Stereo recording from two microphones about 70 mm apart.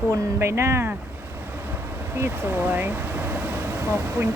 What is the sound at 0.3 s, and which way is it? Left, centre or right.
Speech, right.